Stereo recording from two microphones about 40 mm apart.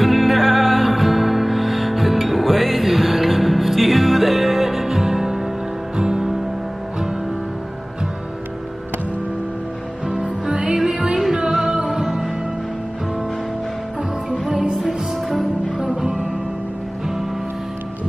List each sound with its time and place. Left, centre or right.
0.0 s music: centre
10.5 s music: right
11.3 s music: centre
14.6 s music: centre
14.9 s music: centre
15.8 s music: centre